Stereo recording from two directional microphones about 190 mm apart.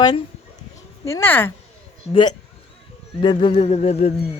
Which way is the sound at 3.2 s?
25° left (ahead or behind).